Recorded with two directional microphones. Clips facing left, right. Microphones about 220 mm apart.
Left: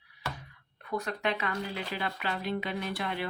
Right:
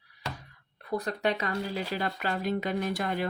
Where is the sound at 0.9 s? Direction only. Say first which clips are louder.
Right 3 dB; 35° right (ahead or behind).